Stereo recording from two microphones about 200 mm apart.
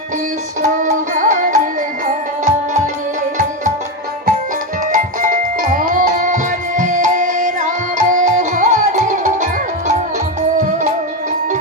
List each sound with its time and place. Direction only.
0.8 s music: 40° right (ahead or behind)
4.9 s music: 40° right (ahead or behind)